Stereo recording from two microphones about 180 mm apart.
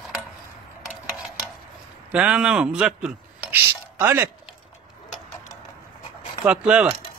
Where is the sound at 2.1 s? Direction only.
5° right (ahead or behind).